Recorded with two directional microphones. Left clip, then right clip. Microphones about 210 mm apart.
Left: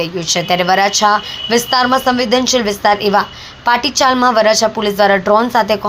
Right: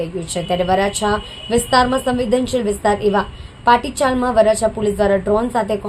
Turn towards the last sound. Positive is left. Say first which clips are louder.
# left 6 dB
turn(degrees=10)  # may be behind; listen again after turning